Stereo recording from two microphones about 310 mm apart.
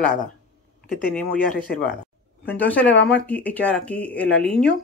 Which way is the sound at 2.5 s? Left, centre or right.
Centre.